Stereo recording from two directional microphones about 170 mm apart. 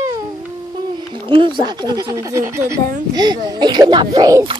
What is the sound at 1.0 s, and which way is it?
A child's voice, 30° right (ahead or behind).